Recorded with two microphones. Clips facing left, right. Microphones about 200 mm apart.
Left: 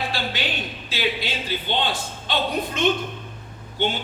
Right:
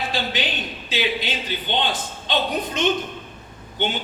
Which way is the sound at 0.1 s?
15° right (ahead or behind).